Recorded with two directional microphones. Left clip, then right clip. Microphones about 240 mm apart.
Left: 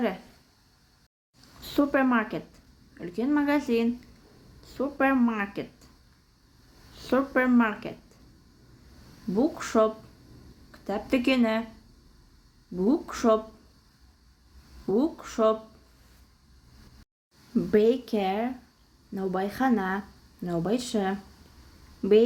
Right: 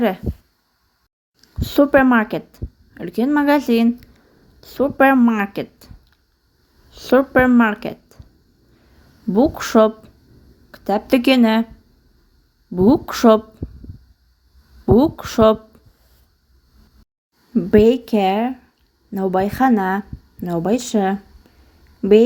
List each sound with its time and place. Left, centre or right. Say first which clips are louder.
1.6 s speech: right 11 dB; right
6.9 s speech: right 11 dB; right
9.3 s speech: right 10 dB; right
12.7 s speech: right 11 dB; right
14.9 s speech: right 11 dB; right
17.5 s a woman's voice: right 9 dB; right